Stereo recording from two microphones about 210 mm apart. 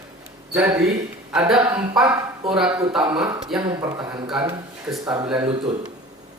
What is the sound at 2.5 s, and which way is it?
Speech, 5° right (ahead or behind).